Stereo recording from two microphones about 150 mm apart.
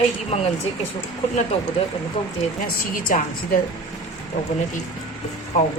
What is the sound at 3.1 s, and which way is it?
Speech, 60° left (ahead or behind).